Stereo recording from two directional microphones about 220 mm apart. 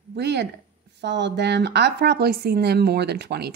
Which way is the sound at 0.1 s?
50° right (ahead or behind).